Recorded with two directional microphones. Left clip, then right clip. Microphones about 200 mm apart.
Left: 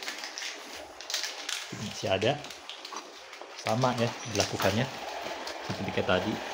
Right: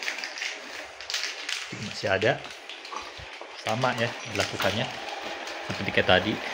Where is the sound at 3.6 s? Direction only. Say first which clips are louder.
Right 1 dB; 20° left (ahead or behind).